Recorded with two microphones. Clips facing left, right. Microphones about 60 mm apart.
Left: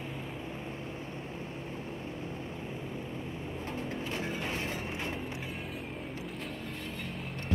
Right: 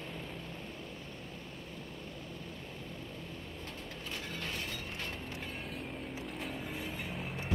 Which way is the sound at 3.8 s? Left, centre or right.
Left.